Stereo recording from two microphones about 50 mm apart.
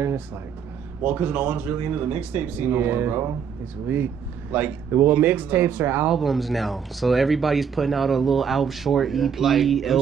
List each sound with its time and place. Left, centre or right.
1.0 s speech: right
6.0 s speech: centre